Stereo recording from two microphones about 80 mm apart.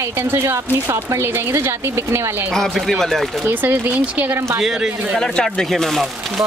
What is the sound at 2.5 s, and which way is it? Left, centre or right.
Speech, centre.